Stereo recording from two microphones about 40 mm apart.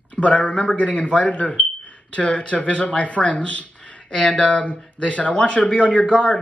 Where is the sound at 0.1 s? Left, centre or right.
Left.